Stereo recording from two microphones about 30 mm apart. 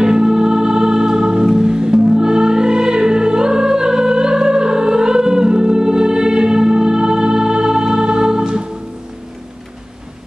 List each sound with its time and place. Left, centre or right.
0.0 s music: right